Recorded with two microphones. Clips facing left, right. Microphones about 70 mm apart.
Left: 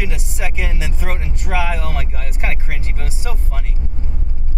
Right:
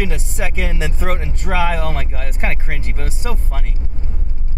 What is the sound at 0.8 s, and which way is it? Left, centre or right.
Speech, right.